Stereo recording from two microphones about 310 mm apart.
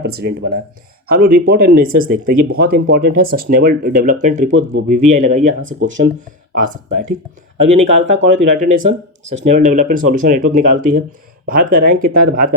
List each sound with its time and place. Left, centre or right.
0.0 s speech: right
4.9 s speech: right
5.1 s speech: right
6.6 s speech: right
7.7 s speech: right